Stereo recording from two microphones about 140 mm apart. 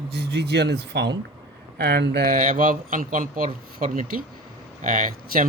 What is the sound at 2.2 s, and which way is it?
Speech, 85° right.